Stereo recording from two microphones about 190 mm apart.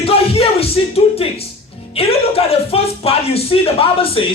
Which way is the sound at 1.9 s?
30° left (ahead or behind).